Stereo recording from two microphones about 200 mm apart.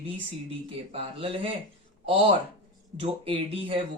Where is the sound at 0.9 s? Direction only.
30° right (ahead or behind).